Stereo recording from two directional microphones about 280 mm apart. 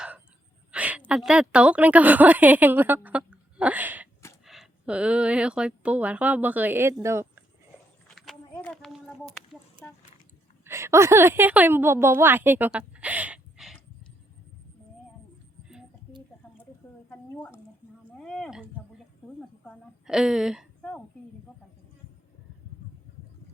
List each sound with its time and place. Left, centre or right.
0.7 s a woman's voice: centre
8.0 s a sound: centre
9.8 s speech: centre
10.6 s a woman's voice: centre
17.1 s a woman's voice: centre